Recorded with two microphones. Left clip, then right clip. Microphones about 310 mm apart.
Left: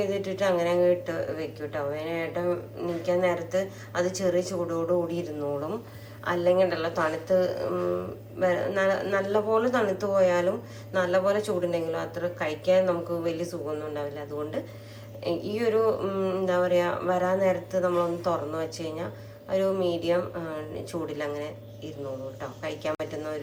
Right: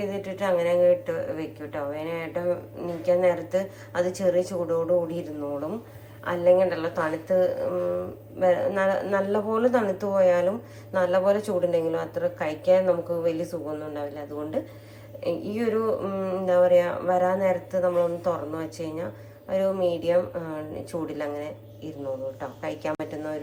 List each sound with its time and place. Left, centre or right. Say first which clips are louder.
0.0 s a woman's voice: left 2 dB; centre